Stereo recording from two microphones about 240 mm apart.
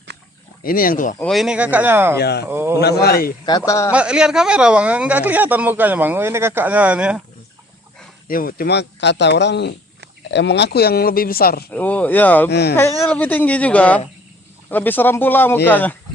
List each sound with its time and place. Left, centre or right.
0.6 s speech: left
1.2 s speech: centre
2.1 s speech: left
2.5 s speech: centre
2.8 s speech: left
3.7 s speech: centre
3.9 s speech: centre
8.3 s speech: left
11.7 s speech: centre
12.5 s speech: left
13.0 s speech: centre